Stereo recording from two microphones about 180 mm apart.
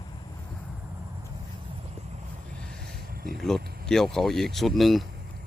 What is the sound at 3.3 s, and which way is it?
Speech, centre (ahead or behind).